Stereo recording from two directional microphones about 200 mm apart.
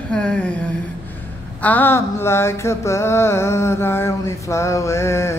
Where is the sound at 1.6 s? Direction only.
10° left (ahead or behind).